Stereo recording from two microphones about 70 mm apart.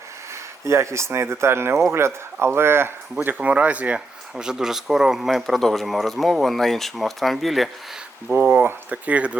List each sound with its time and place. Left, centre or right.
0.6 s speech: right
3.2 s speech: right; by 7.7 s centre
8.5 s speech: right